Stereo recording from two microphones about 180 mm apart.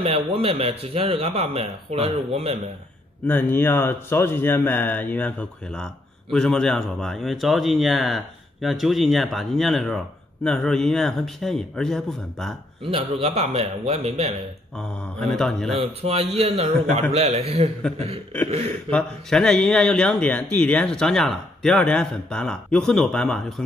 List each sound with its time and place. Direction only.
0.0 s a man's voice: 30° right (ahead or behind)
3.3 s a man's voice: 10° left (ahead or behind)
12.9 s a man's voice: 35° right (ahead or behind)
15.1 s speech: 5° left (ahead or behind)
15.7 s a man's voice: 35° right (ahead or behind)
18.9 s speech: 5° left (ahead or behind)